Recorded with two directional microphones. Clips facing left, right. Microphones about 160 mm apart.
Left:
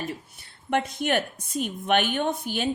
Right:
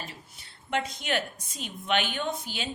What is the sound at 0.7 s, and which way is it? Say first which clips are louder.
A woman's voice: left 5 dB; 55° left (ahead or behind).